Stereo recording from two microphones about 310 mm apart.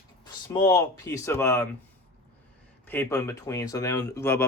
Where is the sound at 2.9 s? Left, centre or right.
Centre.